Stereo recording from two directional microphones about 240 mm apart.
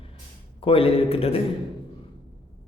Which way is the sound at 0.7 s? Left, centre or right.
Left.